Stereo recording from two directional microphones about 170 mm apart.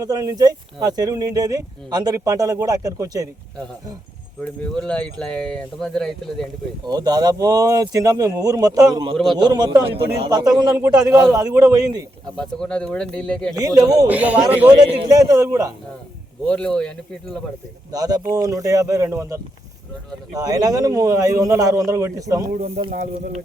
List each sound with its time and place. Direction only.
0.0 s speech: 20° right (ahead or behind)
4.6 s speech: 5° left (ahead or behind)
6.8 s speech: 25° right (ahead or behind)
9.1 s speech: centre (ahead or behind)
9.4 s speech: 25° right (ahead or behind)
12.4 s speech: 5° left (ahead or behind)
13.6 s speech: 20° right (ahead or behind)
14.1 s a man's voice: 10° right (ahead or behind)
14.7 s speech: 25° right (ahead or behind)
16.5 s speech: 5° left (ahead or behind)
17.9 s speech: 20° right (ahead or behind)
22.9 s speech: 45° right (ahead or behind)